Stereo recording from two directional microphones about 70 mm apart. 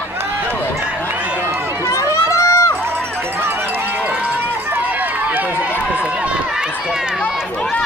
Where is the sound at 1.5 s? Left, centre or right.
Right.